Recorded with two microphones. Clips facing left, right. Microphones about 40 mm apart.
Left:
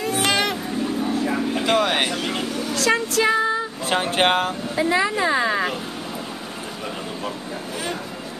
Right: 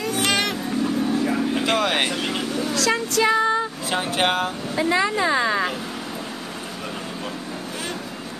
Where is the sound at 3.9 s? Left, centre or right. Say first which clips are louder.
Left 4 dB; left.